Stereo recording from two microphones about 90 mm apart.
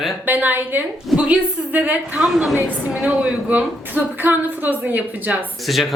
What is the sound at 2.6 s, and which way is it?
A woman's voice, 20° right (ahead or behind).